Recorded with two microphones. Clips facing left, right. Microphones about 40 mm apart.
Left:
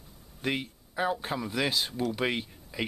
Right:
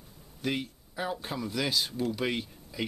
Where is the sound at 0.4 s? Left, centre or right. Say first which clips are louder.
Left 1 dB; centre.